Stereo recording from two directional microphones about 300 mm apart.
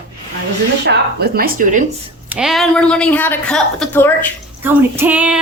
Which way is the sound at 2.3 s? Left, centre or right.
Centre.